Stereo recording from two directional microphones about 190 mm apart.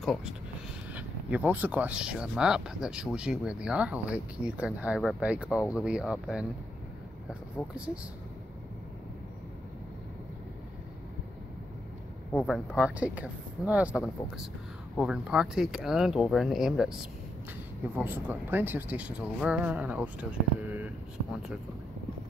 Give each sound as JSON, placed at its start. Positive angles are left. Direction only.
{"t": 0.0, "sound": "speech", "side_deg": 0}
{"t": 7.7, "sound": "speech", "side_deg": -5}
{"t": 12.3, "sound": "speech", "side_deg": 5}
{"t": 12.7, "sound": "speech", "side_deg": -5}